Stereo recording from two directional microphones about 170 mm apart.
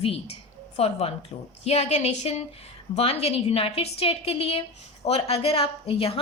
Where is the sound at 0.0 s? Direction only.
35° left (ahead or behind).